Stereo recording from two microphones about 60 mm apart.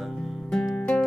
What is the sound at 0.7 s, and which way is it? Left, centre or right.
Music, centre.